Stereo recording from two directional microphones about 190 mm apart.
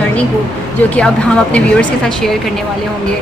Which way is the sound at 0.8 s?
5° left (ahead or behind).